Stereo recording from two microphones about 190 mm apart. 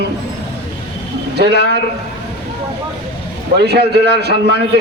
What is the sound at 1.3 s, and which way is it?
Speech, 60° right (ahead or behind).